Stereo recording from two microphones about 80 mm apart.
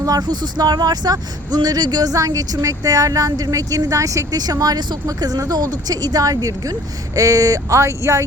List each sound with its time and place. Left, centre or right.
0.0 s speech: right